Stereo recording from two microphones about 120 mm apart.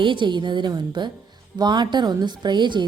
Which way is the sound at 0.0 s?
45° right (ahead or behind).